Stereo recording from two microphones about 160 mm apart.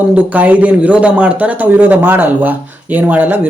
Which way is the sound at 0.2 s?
10° right (ahead or behind).